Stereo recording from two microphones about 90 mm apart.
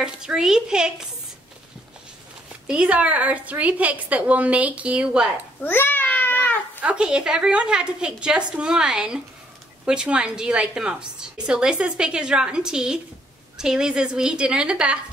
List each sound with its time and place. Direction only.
0.0 s a woman's voice: 5° right (ahead or behind)
2.6 s a woman's voice: 10° right (ahead or behind)
5.6 s a sound: 25° left (ahead or behind)
6.8 s a woman's voice: 10° right (ahead or behind)